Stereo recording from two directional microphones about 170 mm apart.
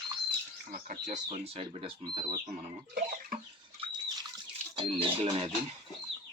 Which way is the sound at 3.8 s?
25° right (ahead or behind).